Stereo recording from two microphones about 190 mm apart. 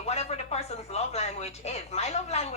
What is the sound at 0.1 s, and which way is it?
Speech, 35° left (ahead or behind).